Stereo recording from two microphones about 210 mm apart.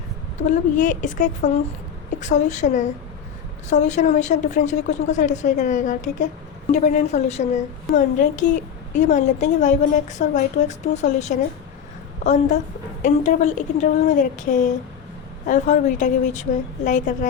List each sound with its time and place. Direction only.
0.3 s a woman's voice: 35° left (ahead or behind)